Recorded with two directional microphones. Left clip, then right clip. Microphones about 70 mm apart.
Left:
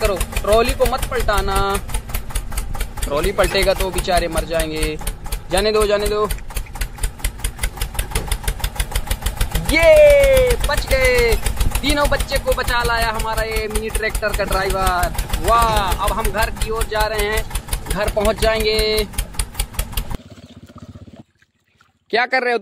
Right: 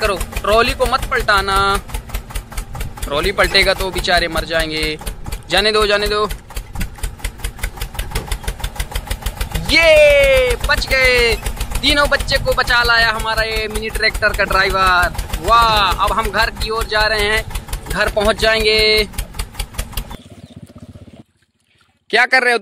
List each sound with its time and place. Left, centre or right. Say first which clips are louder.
0.0 s a sound: right 2 dB; centre
0.5 s vehicle: right 2 dB; centre
3.0 s speech: right 2 dB; centre
6.2 s engine: right 1 dB; centre
9.7 s speech: right 1 dB; centre
16.3 s speech: right 4 dB; centre
19.1 s engine: even; centre
22.1 s speech: right 5 dB; centre